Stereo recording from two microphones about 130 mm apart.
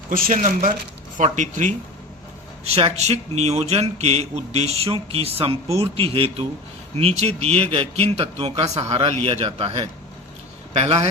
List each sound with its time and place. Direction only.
0.1 s speech: 85° right; by 1.7 s 65° right (ahead or behind)
2.6 s speech: 50° right (ahead or behind)